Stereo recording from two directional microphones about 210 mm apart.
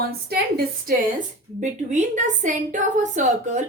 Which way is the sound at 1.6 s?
35° right (ahead or behind).